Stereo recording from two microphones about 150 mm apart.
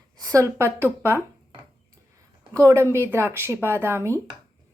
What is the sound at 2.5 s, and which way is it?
A woman's voice, 20° right (ahead or behind).